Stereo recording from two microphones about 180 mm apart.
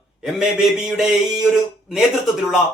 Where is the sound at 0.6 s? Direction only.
5° right (ahead or behind).